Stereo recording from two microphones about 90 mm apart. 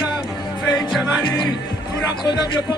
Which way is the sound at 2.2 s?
50° left (ahead or behind).